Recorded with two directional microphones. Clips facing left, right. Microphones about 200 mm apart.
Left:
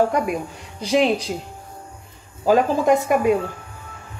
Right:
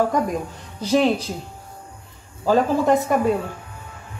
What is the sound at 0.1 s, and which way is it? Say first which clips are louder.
Speech: even; 10° left (ahead or behind).